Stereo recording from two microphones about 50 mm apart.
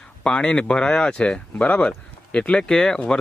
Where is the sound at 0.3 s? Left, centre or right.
Centre.